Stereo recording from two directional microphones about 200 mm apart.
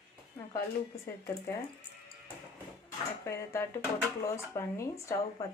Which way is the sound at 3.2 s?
15° left (ahead or behind).